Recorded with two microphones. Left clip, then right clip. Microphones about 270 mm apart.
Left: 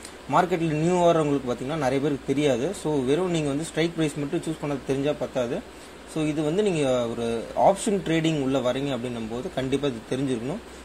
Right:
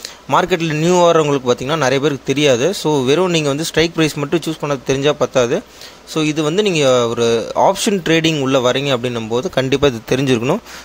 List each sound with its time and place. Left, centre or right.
0.4 s speech: right
2.8 s speech: right
3.1 s speech: right